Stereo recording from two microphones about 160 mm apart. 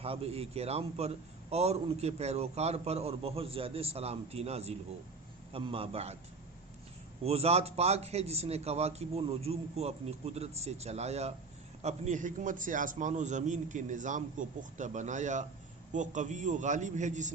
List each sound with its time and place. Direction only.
0.0 s a man's voice: 35° right (ahead or behind)
7.3 s a man's voice: 40° right (ahead or behind)